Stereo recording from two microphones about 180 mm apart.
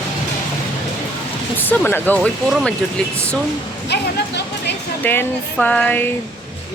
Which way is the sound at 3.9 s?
70° left (ahead or behind).